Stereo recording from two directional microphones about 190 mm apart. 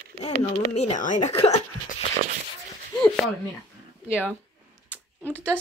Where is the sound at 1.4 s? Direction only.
30° left (ahead or behind).